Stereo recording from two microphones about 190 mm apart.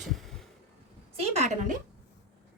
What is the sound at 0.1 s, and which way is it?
Heart sounds, centre (ahead or behind).